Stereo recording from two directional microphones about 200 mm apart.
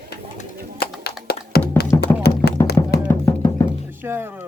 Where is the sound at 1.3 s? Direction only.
50° left (ahead or behind).